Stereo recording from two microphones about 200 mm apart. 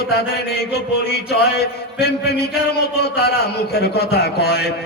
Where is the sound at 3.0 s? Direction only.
55° left (ahead or behind).